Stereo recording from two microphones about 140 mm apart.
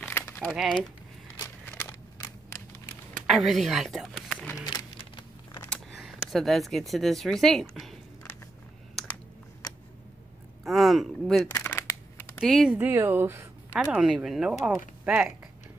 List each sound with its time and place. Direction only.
0.1 s crumpling: 15° left (ahead or behind)
0.5 s speech: 5° right (ahead or behind)
1.7 s a sound: 15° left (ahead or behind)
3.3 s speech: centre (ahead or behind)
4.6 s a sound: 30° left (ahead or behind)
5.7 s speech: centre (ahead or behind)
10.6 s speech: centre (ahead or behind)
11.5 s shuffling cards: 20° left (ahead or behind)
12.4 s speech: centre (ahead or behind)
12.7 s speech: 15° right (ahead or behind)
13.9 s speech: 5° right (ahead or behind)